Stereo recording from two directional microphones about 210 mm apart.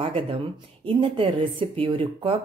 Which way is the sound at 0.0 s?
25° right (ahead or behind).